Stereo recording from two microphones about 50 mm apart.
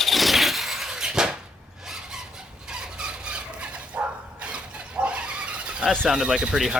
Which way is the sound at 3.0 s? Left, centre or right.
Centre.